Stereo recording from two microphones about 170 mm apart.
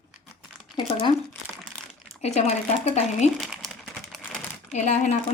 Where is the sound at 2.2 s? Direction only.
40° left (ahead or behind).